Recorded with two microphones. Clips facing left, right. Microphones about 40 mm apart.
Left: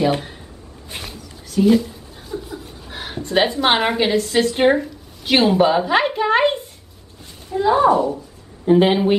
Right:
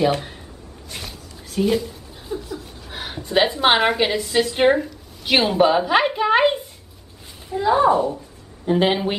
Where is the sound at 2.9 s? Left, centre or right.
Centre.